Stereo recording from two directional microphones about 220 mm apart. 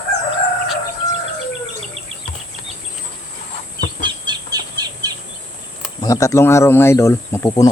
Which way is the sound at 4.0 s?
20° right (ahead or behind).